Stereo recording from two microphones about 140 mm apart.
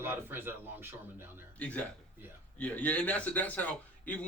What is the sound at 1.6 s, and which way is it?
Speech, 10° left (ahead or behind).